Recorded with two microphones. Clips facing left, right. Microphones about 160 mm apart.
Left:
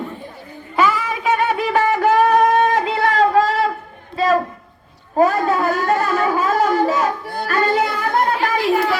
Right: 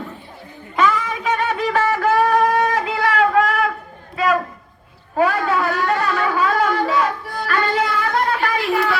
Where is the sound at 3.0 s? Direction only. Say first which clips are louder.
Left 1 dB; 35° left (ahead or behind).